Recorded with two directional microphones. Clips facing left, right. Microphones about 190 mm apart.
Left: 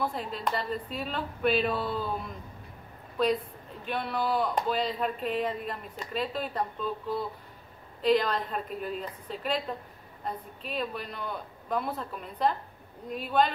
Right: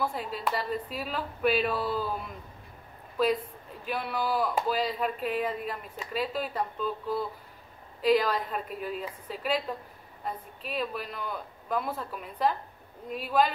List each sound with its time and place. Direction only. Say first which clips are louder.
0.0 s speech: even; 5° right (ahead or behind)
3.8 s speech: left 1 dB; 5° right (ahead or behind)